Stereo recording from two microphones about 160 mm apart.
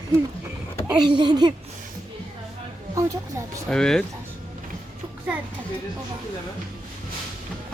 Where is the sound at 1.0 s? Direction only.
30° right (ahead or behind).